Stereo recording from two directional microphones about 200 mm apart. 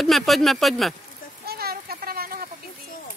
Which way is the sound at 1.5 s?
50° right (ahead or behind).